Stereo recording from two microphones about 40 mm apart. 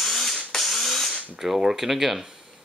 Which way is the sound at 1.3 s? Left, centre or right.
Centre.